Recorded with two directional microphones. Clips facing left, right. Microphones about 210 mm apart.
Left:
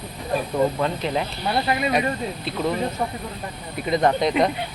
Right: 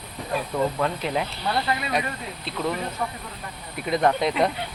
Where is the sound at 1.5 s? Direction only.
20° left (ahead or behind).